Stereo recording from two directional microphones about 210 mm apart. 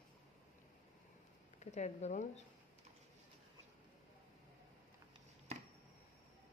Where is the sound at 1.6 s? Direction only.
35° left (ahead or behind).